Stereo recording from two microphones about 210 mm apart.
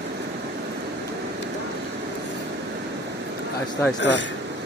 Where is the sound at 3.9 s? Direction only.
55° left (ahead or behind).